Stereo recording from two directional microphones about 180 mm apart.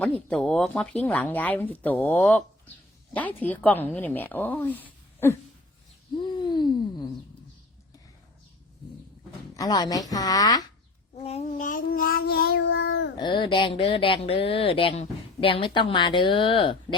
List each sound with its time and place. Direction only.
0.0 s speech: 5° left (ahead or behind)
6.2 s a sound: 25° left (ahead or behind)
9.6 s speech: 20° left (ahead or behind)
11.1 s child singing: 35° left (ahead or behind); by 13.1 s 75° left (ahead or behind)
13.1 s speech: 25° left (ahead or behind)